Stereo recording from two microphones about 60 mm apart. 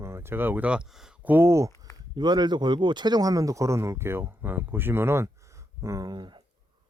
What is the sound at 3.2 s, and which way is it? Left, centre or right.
Speech, right.